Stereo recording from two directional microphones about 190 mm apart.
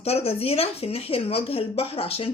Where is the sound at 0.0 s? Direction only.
30° left (ahead or behind).